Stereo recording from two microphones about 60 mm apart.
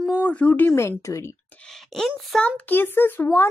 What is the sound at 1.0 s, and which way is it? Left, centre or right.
Speech, left.